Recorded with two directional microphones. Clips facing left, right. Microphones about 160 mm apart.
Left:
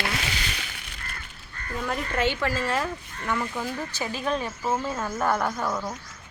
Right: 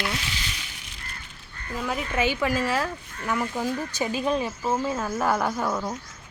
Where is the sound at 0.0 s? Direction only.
70° left (ahead or behind).